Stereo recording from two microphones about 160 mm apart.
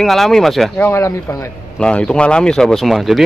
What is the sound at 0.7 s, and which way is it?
Speech, 15° left (ahead or behind).